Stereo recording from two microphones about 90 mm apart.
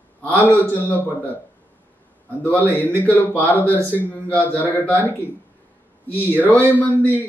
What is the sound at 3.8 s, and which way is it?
Speech, 20° right (ahead or behind).